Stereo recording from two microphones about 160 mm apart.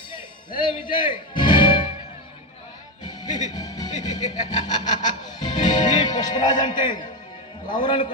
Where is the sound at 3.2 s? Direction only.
25° left (ahead or behind).